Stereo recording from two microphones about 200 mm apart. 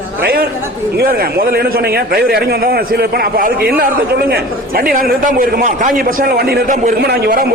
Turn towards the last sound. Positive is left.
turn(degrees=-50)  # may be behind; listen again after turning